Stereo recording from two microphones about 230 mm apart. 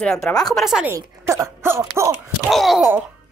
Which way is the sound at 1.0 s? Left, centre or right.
Centre.